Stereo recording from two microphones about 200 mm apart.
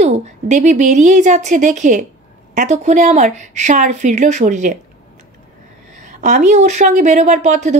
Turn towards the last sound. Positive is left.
turn(degrees=-35)  # may be behind; listen again after turning